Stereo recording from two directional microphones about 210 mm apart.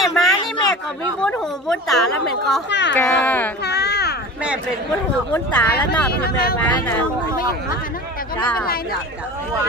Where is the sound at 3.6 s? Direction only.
50° left (ahead or behind).